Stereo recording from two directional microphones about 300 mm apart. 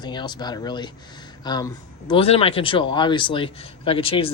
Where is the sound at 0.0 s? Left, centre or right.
Centre.